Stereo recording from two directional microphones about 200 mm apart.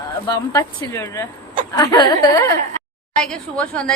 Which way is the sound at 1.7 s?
20° left (ahead or behind).